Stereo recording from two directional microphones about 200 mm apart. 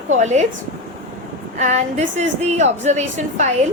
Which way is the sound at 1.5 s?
35° right (ahead or behind).